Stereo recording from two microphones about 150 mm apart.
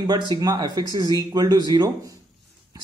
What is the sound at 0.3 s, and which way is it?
Speech, 25° right (ahead or behind).